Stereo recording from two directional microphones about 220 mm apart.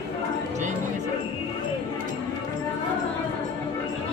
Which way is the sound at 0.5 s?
35° right (ahead or behind).